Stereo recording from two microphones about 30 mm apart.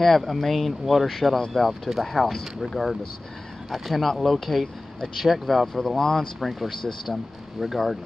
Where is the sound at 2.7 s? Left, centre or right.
Centre.